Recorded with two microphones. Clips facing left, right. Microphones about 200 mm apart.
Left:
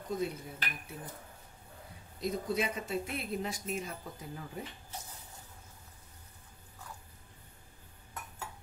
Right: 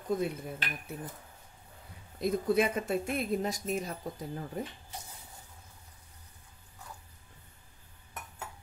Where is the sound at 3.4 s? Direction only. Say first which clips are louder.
Right 4 dB; 40° right (ahead or behind).